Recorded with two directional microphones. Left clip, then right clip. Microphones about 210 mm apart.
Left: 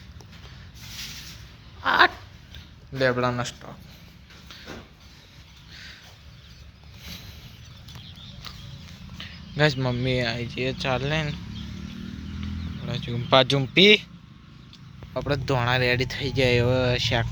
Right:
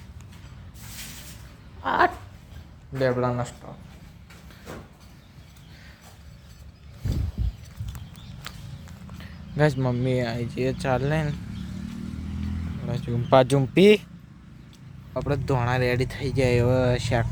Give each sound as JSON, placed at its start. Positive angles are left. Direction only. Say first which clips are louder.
{"t": 1.8, "sound": "a sound", "louder": "left 3 dB", "side_deg": -20}
{"t": 3.0, "sound": "speech", "louder": "left 1 dB", "side_deg": -5}
{"t": 9.1, "sound": "speech", "louder": "left 1 dB", "side_deg": -15}
{"t": 12.8, "sound": "speech", "louder": "right 1 dB", "side_deg": -20}
{"t": 15.1, "sound": "speech", "louder": "left 1 dB", "side_deg": -5}